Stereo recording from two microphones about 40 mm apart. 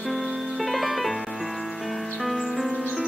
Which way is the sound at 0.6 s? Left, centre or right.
Centre.